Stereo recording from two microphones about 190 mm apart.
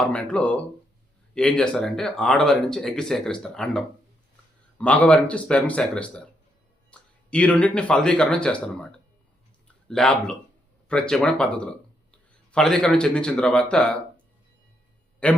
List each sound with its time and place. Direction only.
0.0 s speech: 5° left (ahead or behind)
9.9 s speech: 5° left (ahead or behind)